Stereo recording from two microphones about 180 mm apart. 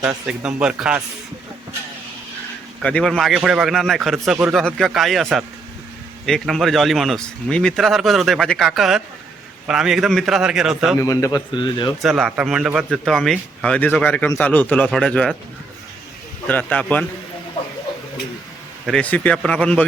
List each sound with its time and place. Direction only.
0.0 s speech: 5° right (ahead or behind)
2.8 s speech: 5° left (ahead or behind)
10.9 s a man's voice: 15° left (ahead or behind)
12.0 s speech: centre (ahead or behind)
16.5 s speech: 10° left (ahead or behind)
18.9 s speech: 5° left (ahead or behind)